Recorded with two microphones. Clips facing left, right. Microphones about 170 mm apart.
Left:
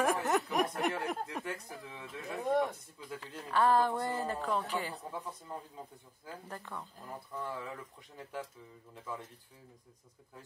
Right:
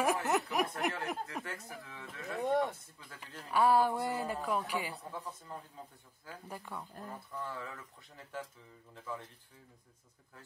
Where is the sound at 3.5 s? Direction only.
10° right (ahead or behind).